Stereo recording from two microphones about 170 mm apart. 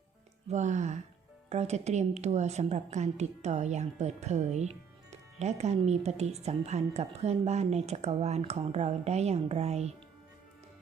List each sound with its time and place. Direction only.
0.5 s a woman's voice: 45° right (ahead or behind)